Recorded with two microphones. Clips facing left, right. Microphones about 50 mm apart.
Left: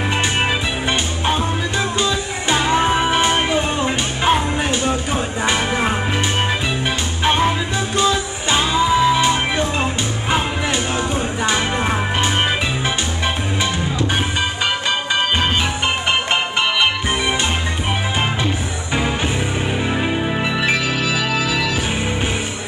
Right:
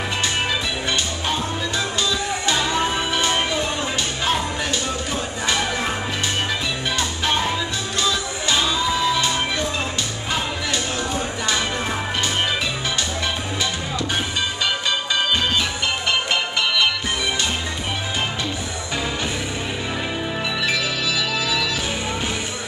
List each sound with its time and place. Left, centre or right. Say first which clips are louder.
0.4 s music: left 4 dB; left
8.0 s music: left 4 dB; left
20.6 s music: left 3 dB; left